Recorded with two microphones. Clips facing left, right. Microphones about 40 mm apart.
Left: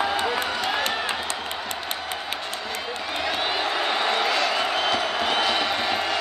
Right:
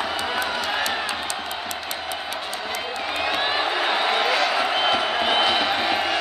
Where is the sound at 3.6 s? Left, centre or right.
Centre.